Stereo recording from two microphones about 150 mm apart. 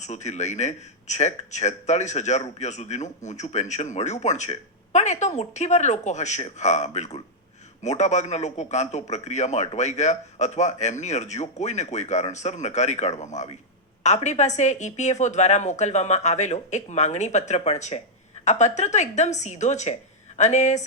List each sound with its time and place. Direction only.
0.0 s a man's voice: 50° left (ahead or behind)